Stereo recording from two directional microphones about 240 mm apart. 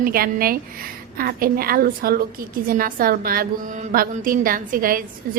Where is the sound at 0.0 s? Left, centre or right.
Right.